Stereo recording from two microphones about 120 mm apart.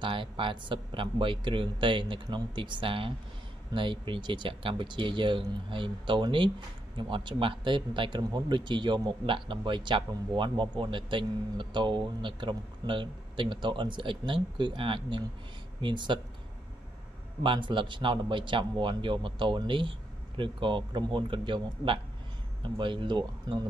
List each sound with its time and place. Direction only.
0.0 s a man's voice: 45° right (ahead or behind)
17.4 s a man's voice: 45° right (ahead or behind)